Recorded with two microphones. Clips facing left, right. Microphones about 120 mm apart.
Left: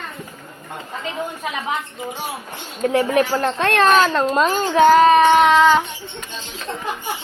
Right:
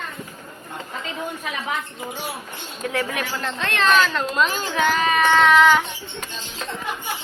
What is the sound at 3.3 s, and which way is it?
A child's voice, 45° left (ahead or behind).